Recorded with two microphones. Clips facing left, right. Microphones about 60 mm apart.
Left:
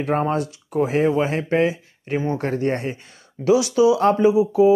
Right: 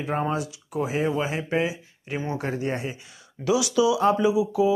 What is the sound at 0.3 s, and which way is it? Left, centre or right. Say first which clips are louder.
Speech: left 5 dB; left.